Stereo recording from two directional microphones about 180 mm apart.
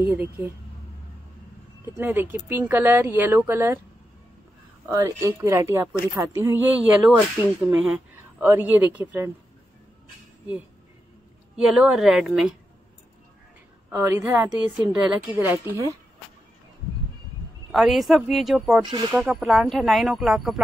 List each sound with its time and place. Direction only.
2.0 s a woman's voice: 10° right (ahead or behind)
4.8 s a woman's voice: 20° right (ahead or behind)
11.5 s speech: 5° right (ahead or behind)
13.9 s a woman's voice: 15° right (ahead or behind)
17.6 s speech: centre (ahead or behind)
18.8 s speech: 25° right (ahead or behind)
19.1 s speech: 5° right (ahead or behind)